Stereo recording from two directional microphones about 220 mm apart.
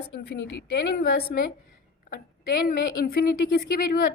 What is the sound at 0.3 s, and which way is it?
Speech, 50° left (ahead or behind).